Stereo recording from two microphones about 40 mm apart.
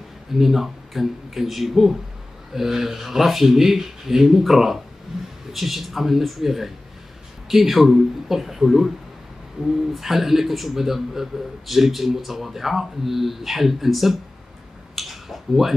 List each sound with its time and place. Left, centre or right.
0.3 s a man's voice: centre
9.9 s a man's voice: centre
15.0 s a sound: centre